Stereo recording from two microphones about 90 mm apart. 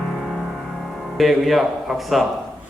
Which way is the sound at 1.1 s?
Centre (ahead or behind).